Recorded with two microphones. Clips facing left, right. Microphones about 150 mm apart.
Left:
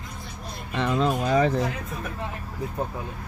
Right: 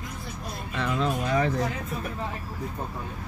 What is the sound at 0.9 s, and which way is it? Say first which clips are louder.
Speech: left 4 dB; 35° left (ahead or behind).